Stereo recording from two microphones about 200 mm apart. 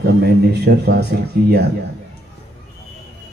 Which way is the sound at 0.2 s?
55° right (ahead or behind).